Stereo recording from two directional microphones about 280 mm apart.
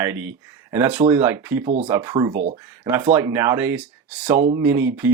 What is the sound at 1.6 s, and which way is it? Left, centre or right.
Speech, right.